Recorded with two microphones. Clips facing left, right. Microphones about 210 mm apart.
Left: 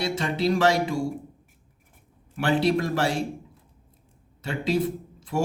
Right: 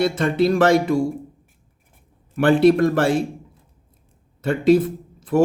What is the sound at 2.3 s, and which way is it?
Speech, 55° right (ahead or behind).